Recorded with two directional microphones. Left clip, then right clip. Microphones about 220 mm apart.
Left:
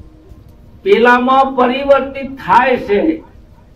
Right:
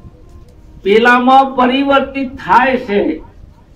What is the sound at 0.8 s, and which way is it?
A man's voice, 50° right (ahead or behind).